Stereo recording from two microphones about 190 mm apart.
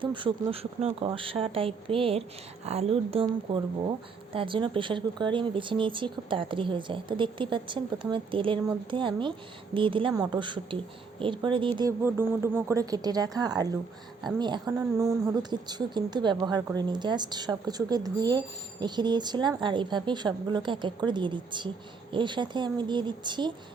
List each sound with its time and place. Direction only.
0.0 s a woman's voice: 25° right (ahead or behind)